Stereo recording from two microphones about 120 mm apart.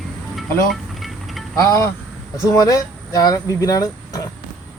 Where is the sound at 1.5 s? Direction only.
25° left (ahead or behind).